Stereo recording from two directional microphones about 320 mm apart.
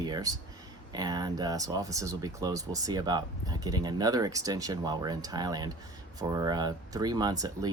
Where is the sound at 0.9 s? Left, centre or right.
Centre.